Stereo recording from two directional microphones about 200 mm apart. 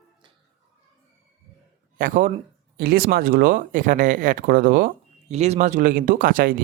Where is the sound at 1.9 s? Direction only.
40° right (ahead or behind).